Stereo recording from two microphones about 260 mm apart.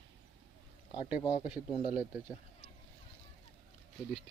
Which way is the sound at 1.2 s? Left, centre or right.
Left.